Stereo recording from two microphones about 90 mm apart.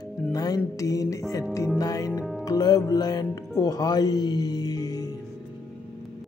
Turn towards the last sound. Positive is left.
turn(degrees=45)  # may be behind; listen again after turning